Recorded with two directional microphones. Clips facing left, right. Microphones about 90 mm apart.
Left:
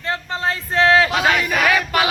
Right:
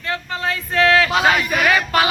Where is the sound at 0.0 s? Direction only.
30° left (ahead or behind).